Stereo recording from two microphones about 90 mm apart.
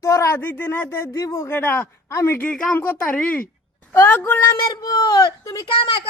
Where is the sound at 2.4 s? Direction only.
5° left (ahead or behind).